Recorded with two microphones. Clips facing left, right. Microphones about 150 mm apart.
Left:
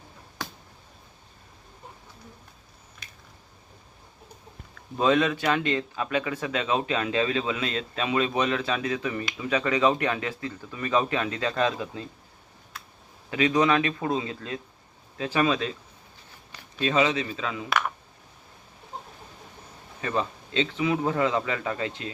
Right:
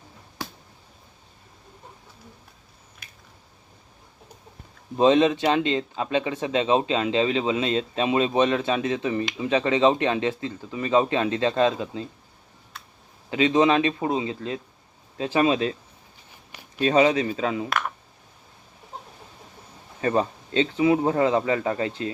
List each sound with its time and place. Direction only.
4.9 s speech: 30° right (ahead or behind)
13.3 s speech: 25° right (ahead or behind)
16.5 s a sound: 15° right (ahead or behind)
16.8 s speech: 35° right (ahead or behind)
17.7 s speech: centre (ahead or behind)
20.0 s speech: 35° right (ahead or behind)